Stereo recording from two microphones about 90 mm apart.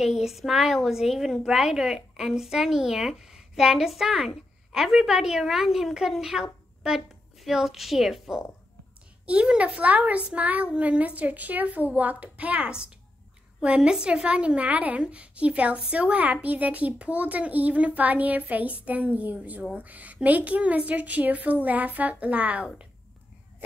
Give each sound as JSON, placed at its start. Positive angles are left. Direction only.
{"t": 0.0, "sound": "a woman's voice", "side_deg": -5}